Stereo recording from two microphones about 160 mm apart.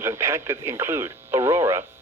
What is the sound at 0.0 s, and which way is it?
Speech, 15° right (ahead or behind).